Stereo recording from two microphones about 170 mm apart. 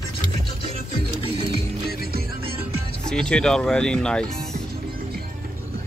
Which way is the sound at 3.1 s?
5° left (ahead or behind).